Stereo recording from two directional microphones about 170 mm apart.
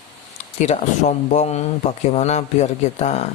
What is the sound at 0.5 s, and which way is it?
Speech, 40° left (ahead or behind).